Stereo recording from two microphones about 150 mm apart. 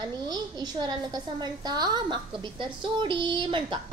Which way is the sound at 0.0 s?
25° right (ahead or behind).